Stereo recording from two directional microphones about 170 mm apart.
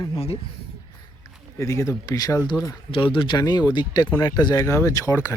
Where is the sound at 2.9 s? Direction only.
30° left (ahead or behind).